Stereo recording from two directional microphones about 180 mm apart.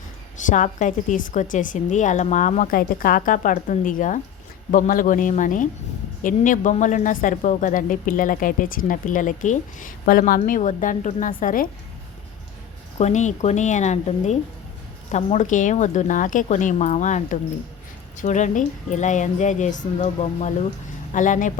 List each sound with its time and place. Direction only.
0.4 s a woman's voice: 45° left (ahead or behind)
13.0 s a woman's voice: 40° left (ahead or behind)